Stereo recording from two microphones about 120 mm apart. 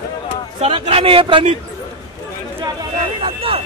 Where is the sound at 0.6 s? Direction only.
50° right (ahead or behind).